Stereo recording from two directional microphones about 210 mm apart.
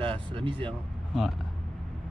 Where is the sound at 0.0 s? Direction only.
25° right (ahead or behind).